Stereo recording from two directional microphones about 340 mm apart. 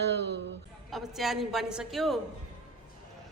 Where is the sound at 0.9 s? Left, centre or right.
Centre.